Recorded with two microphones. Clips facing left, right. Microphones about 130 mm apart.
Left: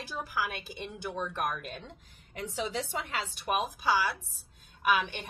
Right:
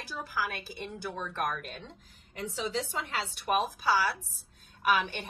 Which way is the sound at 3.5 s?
15° left (ahead or behind).